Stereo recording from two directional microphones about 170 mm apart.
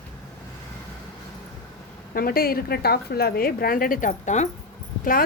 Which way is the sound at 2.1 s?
60° left (ahead or behind).